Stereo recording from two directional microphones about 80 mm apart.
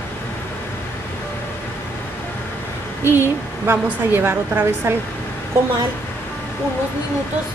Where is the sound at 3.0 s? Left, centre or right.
Right.